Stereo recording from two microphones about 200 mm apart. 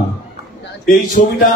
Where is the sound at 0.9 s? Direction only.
40° left (ahead or behind).